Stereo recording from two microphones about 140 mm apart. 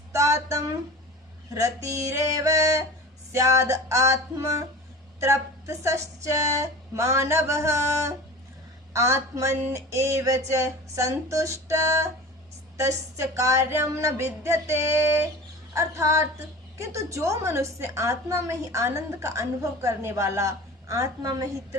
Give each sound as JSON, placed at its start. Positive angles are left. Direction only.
{"t": 0.1, "sound": "a sound", "side_deg": -20}
{"t": 1.5, "sound": "a woman's voice", "side_deg": -20}
{"t": 13.1, "sound": "a woman's voice", "side_deg": -20}